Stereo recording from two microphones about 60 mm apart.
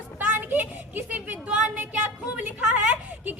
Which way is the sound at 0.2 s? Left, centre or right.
Right.